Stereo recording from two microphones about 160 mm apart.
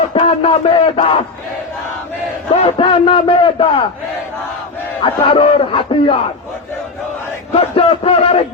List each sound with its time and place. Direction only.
0.1 s speech: 35° left (ahead or behind)
2.7 s speech: 35° left (ahead or behind)
5.0 s speech: 35° left (ahead or behind)
7.5 s speech: 35° left (ahead or behind)